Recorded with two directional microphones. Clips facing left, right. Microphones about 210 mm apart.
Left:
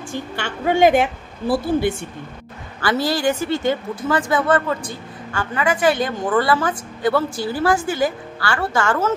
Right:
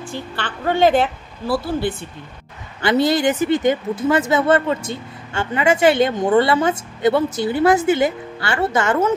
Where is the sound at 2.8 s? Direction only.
20° right (ahead or behind).